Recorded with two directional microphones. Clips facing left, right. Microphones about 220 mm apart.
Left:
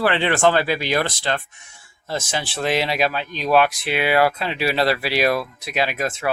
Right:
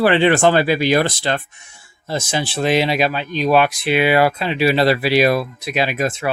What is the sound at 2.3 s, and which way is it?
Speech, centre (ahead or behind).